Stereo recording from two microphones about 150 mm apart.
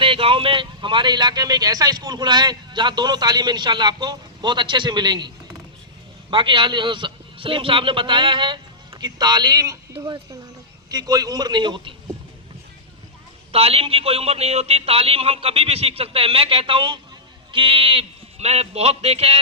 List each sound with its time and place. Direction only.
0.0 s speech: 35° right (ahead or behind)
6.3 s a man's voice: 35° right (ahead or behind)
10.8 s speech: 25° right (ahead or behind)
13.5 s a man's voice: 40° right (ahead or behind)